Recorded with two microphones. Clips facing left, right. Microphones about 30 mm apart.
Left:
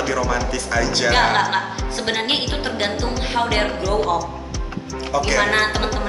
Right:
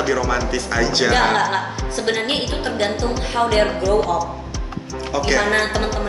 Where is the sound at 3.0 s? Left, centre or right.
Centre.